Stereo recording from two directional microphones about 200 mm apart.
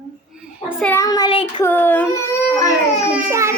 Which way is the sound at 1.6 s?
10° left (ahead or behind).